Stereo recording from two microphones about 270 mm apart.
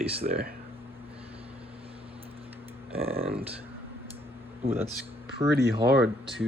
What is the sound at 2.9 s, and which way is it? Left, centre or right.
Speech, right.